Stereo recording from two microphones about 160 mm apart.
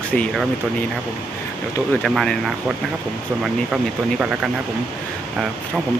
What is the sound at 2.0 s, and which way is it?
Speech, 5° left (ahead or behind).